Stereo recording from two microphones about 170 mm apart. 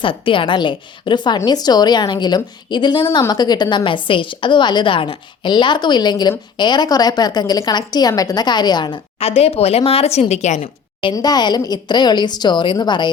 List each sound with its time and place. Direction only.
0.0 s a woman's voice: 30° left (ahead or behind)
11.0 s a woman's voice: 25° left (ahead or behind)